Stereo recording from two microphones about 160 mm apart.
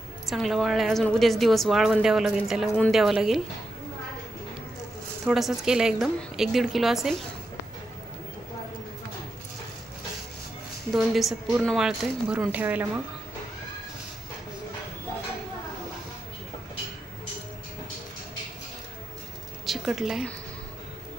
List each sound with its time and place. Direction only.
0.3 s a woman's voice: centre (ahead or behind)
5.2 s a woman's voice: centre (ahead or behind)
10.9 s a woman's voice: centre (ahead or behind)
19.6 s a sound: centre (ahead or behind)